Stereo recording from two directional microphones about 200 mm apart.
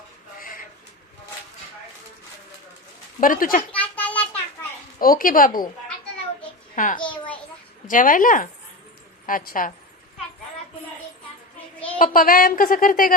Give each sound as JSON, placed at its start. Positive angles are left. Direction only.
{"t": 0.3, "sound": "a sound", "side_deg": 45}
{"t": 3.2, "sound": "a woman's voice", "side_deg": 45}
{"t": 3.7, "sound": "a sound", "side_deg": 5}
{"t": 4.9, "sound": "a woman's voice", "side_deg": 45}
{"t": 6.7, "sound": "a child's voice", "side_deg": 40}
{"t": 11.9, "sound": "a woman's voice", "side_deg": 45}